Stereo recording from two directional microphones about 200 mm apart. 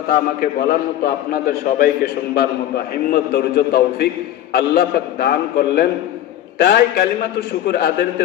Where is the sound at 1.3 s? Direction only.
45° left (ahead or behind).